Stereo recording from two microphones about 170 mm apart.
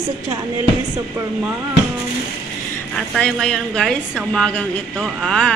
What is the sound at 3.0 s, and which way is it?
A woman's voice, 5° left (ahead or behind).